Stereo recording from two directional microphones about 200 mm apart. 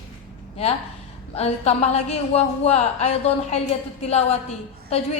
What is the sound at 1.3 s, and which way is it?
A woman's voice, 30° left (ahead or behind).